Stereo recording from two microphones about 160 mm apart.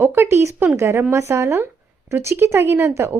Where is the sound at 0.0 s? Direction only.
15° right (ahead or behind).